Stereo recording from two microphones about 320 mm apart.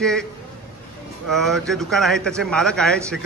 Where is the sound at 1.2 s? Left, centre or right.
Centre.